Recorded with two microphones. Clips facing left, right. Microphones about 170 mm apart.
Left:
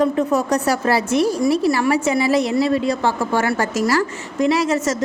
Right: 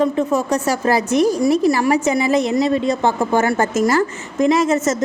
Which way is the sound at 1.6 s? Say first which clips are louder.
Right 2 dB; 40° right (ahead or behind).